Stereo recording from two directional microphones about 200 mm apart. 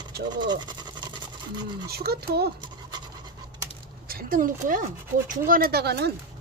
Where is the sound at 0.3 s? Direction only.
20° right (ahead or behind).